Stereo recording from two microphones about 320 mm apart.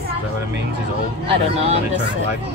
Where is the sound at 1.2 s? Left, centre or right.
Centre.